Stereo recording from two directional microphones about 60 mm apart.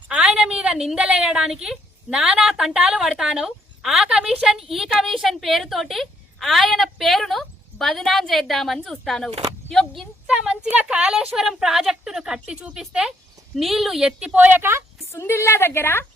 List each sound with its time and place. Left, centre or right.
0.1 s a sound: centre
0.7 s a woman's voice: centre
10.2 s a sound: centre
10.8 s a woman's voice: centre
13.6 s a woman's voice: centre
14.0 s a woman's voice: centre
14.3 s speech: right
15.1 s a woman's voice: left